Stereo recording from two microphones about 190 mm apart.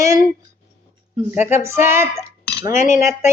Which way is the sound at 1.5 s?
15° right (ahead or behind).